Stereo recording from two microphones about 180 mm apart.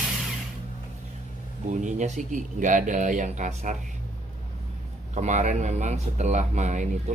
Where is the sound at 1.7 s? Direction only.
40° right (ahead or behind).